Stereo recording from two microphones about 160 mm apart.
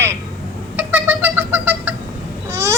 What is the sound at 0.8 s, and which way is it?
Cat, 10° right (ahead or behind).